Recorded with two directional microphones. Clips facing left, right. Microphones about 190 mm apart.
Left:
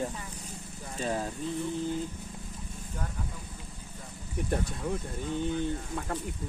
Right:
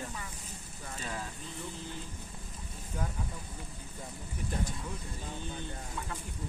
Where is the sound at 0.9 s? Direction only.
35° left (ahead or behind).